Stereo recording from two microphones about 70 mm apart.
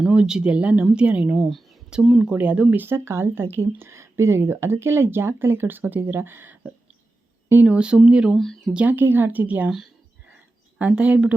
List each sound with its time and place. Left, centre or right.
0.1 s speech: centre
1.4 s speech: centre
1.9 s speech: centre
8.9 s speech: right
10.8 s speech: right